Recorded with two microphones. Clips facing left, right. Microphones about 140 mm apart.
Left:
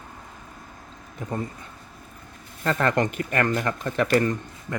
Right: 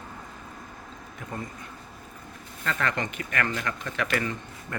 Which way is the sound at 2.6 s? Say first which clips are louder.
Left 7 dB; 40° left (ahead or behind).